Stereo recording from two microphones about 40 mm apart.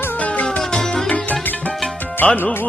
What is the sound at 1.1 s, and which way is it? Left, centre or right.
Music, left.